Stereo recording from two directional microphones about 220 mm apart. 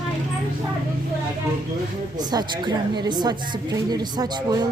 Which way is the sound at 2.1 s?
20° right (ahead or behind).